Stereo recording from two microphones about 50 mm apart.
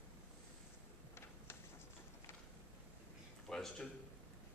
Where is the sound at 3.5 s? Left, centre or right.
Centre.